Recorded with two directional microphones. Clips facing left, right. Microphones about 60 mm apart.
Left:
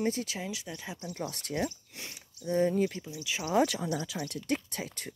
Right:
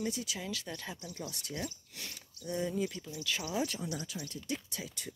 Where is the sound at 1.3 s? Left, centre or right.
Left.